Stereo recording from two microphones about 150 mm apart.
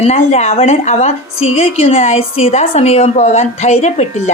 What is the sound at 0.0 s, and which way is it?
A woman's voice, 45° left (ahead or behind).